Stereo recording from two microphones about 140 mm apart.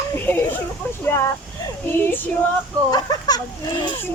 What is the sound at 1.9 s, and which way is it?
Female singing, 15° left (ahead or behind).